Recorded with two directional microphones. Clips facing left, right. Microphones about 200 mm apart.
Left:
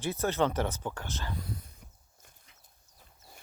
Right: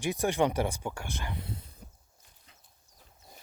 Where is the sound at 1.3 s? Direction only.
25° right (ahead or behind).